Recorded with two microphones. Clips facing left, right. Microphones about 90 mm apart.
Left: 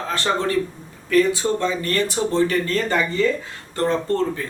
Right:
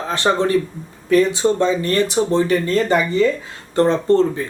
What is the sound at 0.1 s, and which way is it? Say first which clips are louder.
Speech: right 5 dB; 20° right (ahead or behind).